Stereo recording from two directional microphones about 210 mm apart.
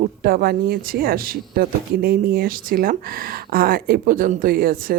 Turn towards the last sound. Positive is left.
turn(degrees=-45)  # may be behind; listen again after turning